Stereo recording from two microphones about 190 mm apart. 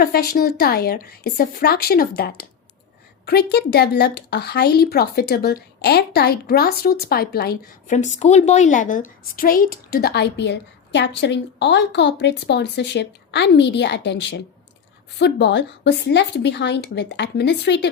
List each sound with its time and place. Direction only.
0.0 s a woman's voice: 55° left (ahead or behind)
7.9 s a woman's voice: 40° left (ahead or behind); by 17.8 s 65° left (ahead or behind)